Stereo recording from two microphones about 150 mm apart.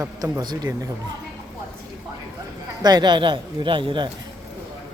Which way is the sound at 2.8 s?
30° right (ahead or behind).